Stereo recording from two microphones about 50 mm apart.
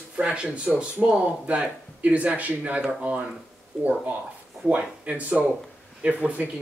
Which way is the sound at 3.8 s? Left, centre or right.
Right.